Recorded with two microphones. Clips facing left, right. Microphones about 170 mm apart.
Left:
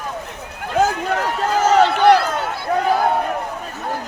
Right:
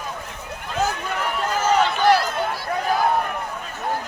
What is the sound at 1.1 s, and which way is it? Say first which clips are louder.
Run: left 5 dB; 75° left (ahead or behind).